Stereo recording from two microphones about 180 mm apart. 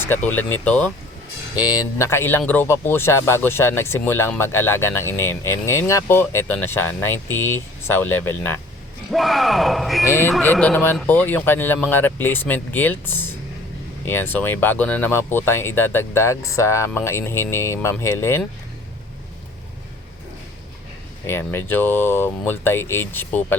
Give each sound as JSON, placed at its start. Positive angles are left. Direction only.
{"t": 0.0, "sound": "speech", "side_deg": 10}
{"t": 1.5, "sound": "speech", "side_deg": 20}
{"t": 9.0, "sound": "speech", "side_deg": 0}
{"t": 10.1, "sound": "speech", "side_deg": 15}
{"t": 21.2, "sound": "speech", "side_deg": 10}